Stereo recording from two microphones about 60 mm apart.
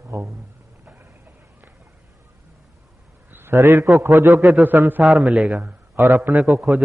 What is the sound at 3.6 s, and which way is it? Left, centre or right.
Speech, right.